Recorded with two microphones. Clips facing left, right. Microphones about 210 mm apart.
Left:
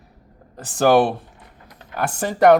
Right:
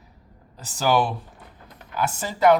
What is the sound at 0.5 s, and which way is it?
Speech, 50° left (ahead or behind).